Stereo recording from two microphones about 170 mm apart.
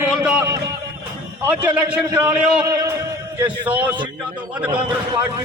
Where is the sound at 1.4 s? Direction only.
10° right (ahead or behind).